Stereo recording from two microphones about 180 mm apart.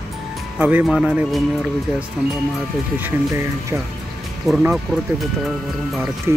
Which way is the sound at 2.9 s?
15° right (ahead or behind).